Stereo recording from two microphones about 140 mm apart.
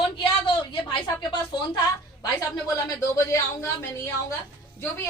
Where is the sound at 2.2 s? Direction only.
25° left (ahead or behind).